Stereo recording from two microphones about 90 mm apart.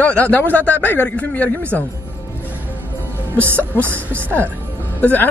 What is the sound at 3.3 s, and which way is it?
Speech, 25° right (ahead or behind).